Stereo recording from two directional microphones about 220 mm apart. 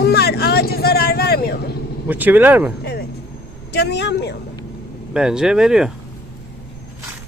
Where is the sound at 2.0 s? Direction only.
10° right (ahead or behind).